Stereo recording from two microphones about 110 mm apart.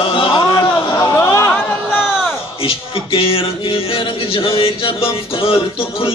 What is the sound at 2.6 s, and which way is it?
Speech, 55° left (ahead or behind).